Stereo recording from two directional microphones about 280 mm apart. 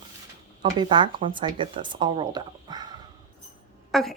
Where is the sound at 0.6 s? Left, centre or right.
Centre.